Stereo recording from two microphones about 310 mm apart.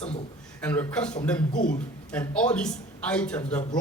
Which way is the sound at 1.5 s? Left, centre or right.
Left.